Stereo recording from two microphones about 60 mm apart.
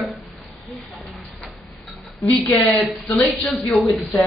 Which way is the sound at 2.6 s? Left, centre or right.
Left.